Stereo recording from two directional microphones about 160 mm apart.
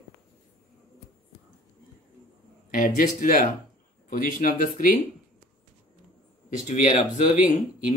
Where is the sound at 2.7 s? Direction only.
60° left (ahead or behind).